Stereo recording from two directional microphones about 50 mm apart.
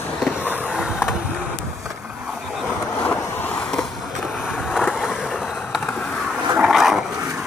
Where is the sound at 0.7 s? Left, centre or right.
Centre.